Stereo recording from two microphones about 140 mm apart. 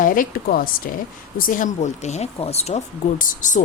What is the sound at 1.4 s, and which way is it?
Speech, 70° left (ahead or behind).